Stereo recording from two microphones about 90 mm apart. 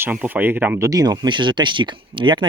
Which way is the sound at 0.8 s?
45° right (ahead or behind).